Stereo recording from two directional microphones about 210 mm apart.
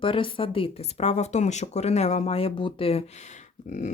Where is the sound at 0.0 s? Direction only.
25° left (ahead or behind).